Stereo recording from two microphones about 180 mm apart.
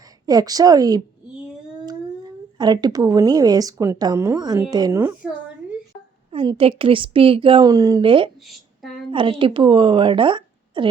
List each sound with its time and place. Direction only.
0.3 s a woman's voice: 20° right (ahead or behind)
2.6 s a woman's voice: 25° right (ahead or behind)
6.3 s a woman's voice: 30° right (ahead or behind)